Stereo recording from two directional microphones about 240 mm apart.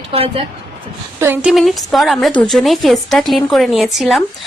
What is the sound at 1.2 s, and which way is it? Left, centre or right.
A woman's voice, centre.